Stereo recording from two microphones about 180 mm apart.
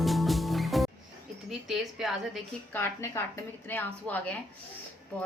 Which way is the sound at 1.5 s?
Centre (ahead or behind).